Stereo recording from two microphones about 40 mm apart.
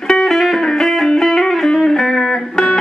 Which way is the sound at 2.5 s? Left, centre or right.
Left.